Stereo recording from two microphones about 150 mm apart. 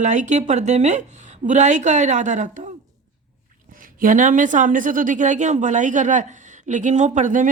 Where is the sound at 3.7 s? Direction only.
65° right (ahead or behind).